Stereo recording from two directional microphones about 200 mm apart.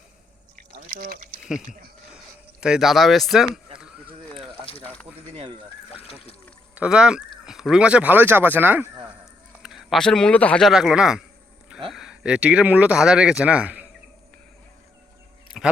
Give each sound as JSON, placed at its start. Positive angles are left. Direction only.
{"t": 0.5, "sound": "pour", "side_deg": -40}
{"t": 2.1, "sound": "a sound", "side_deg": -5}
{"t": 5.3, "sound": "speech", "side_deg": -30}
{"t": 6.7, "sound": "speech", "side_deg": -5}